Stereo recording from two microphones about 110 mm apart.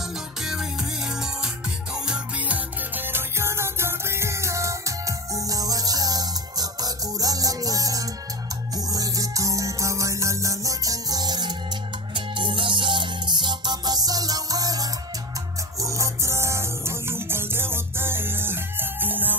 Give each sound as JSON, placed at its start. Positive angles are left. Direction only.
{"t": 0.4, "sound": "music", "side_deg": -5}